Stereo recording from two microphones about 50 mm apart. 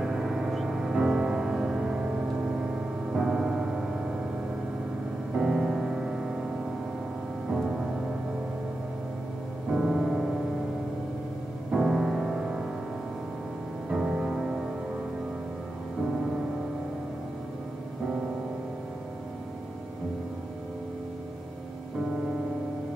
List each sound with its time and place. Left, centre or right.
0.0 s music: centre
2.0 s music: right
5.3 s music: centre
7.4 s music: centre
9.7 s music: centre
11.7 s music: centre
13.8 s music: centre